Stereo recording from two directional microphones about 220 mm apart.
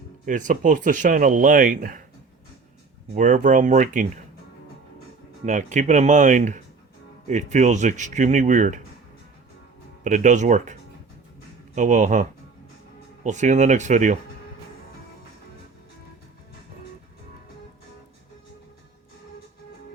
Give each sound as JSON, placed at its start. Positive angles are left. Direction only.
{"t": 0.3, "sound": "speech", "side_deg": -35}
{"t": 3.2, "sound": "speech", "side_deg": -35}
{"t": 5.5, "sound": "speech", "side_deg": -35}
{"t": 10.0, "sound": "speech", "side_deg": -35}